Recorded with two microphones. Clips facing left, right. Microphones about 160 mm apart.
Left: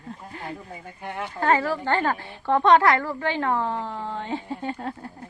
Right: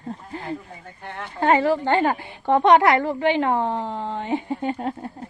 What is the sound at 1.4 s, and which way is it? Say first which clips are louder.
A woman's voice: right 4 dB; 20° right (ahead or behind).